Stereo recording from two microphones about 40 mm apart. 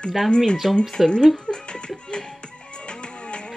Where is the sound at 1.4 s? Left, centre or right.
Left.